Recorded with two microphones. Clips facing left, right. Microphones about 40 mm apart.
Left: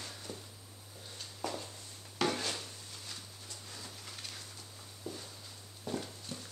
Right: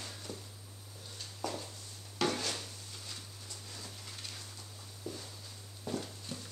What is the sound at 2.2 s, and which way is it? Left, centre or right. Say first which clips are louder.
Drawer open or close: even; centre.